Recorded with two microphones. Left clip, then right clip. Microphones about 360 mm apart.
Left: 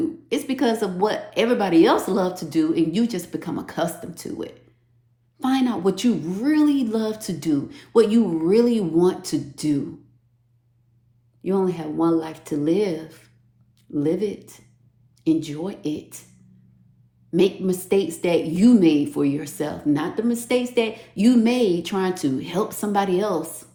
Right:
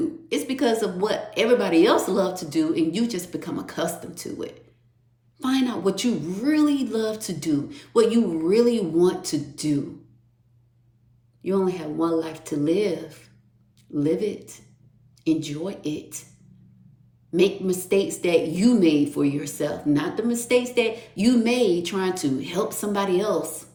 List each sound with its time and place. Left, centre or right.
0.0 s a woman's voice: centre
11.4 s a woman's voice: centre
17.3 s a woman's voice: centre